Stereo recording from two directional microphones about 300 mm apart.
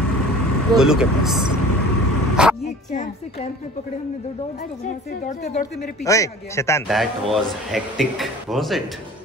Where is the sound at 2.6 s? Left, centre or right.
Left.